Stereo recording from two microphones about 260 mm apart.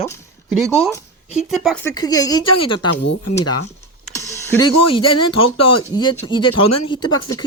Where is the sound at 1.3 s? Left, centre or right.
Centre.